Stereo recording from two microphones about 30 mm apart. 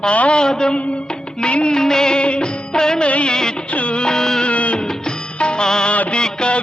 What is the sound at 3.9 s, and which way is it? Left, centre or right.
Music, left.